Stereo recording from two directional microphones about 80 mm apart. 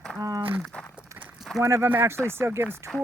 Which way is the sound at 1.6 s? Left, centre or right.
Right.